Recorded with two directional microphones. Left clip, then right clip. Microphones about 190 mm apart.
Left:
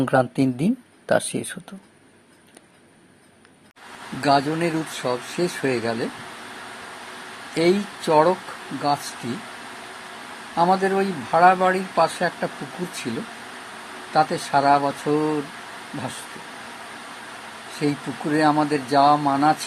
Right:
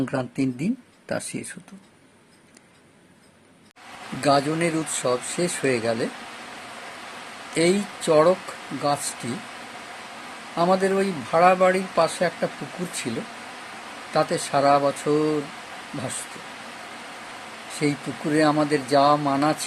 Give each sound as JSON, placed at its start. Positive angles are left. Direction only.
{"t": 0.0, "sound": "speech", "side_deg": 15}
{"t": 4.2, "sound": "speech", "side_deg": -10}
{"t": 7.5, "sound": "speech", "side_deg": -15}
{"t": 10.5, "sound": "speech", "side_deg": -15}
{"t": 17.7, "sound": "speech", "side_deg": -15}